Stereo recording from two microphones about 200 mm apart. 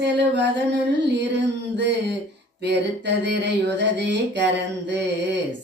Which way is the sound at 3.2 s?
60° right (ahead or behind).